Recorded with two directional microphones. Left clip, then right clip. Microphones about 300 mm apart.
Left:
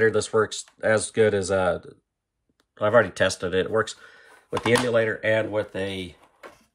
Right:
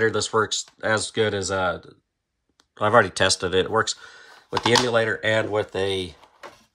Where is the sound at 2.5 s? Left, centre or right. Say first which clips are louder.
Right 1 dB; centre.